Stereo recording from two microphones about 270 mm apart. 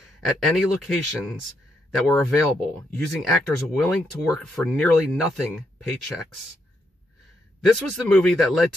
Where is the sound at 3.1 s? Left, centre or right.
Centre.